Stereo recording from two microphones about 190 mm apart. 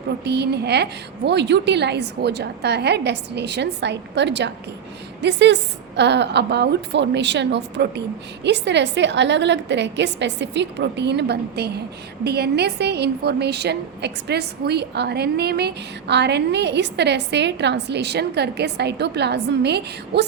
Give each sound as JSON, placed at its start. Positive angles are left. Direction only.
{"t": 0.3, "sound": "a woman's voice", "side_deg": -60}